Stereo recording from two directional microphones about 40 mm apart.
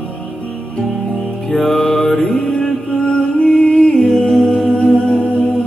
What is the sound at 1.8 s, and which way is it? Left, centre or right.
Mantra, centre.